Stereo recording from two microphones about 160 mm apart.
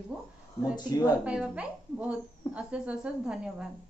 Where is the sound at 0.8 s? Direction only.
25° left (ahead or behind).